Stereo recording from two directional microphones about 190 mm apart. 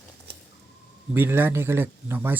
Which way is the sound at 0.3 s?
60° right (ahead or behind).